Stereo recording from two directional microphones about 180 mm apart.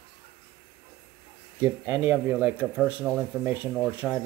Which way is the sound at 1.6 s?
10° right (ahead or behind).